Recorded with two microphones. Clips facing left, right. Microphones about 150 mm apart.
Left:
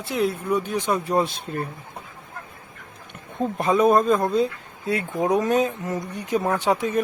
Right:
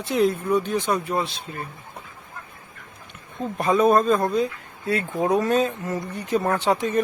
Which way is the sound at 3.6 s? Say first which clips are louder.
Even; 20° left (ahead or behind).